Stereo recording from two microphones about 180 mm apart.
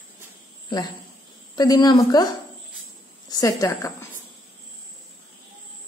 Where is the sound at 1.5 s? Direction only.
20° left (ahead or behind).